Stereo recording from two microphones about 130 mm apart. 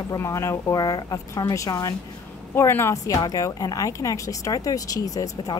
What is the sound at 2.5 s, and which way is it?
A woman's voice, 20° left (ahead or behind).